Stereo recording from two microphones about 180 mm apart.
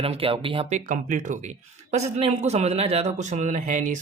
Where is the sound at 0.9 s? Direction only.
45° right (ahead or behind).